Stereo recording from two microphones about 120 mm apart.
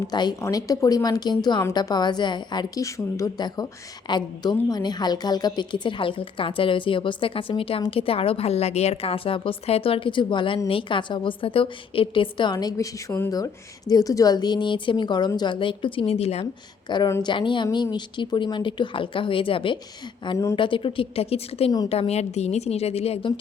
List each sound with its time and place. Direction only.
0.1 s a woman's voice: 35° left (ahead or behind); by 16.5 s 60° left (ahead or behind)
16.9 s a woman's voice: 40° left (ahead or behind); by 23.3 s 55° left (ahead or behind)